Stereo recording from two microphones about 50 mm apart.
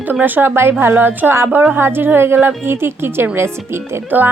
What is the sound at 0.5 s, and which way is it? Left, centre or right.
A woman's voice, right.